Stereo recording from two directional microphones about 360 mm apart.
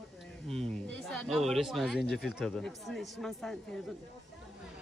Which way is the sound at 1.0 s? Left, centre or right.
Centre.